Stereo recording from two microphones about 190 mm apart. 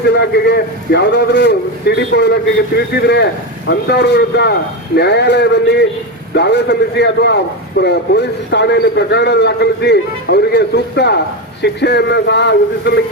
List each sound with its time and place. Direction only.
0.1 s a man's voice: 60° left (ahead or behind)